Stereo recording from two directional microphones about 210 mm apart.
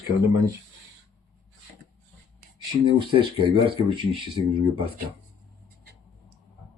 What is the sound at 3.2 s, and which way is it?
Speech, 25° right (ahead or behind).